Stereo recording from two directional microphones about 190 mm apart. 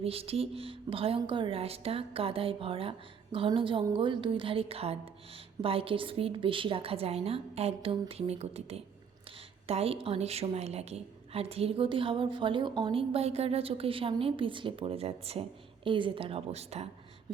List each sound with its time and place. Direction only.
0.0 s a woman's voice: 30° right (ahead or behind)